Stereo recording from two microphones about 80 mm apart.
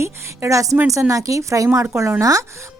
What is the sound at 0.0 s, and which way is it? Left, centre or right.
A woman's voice, right.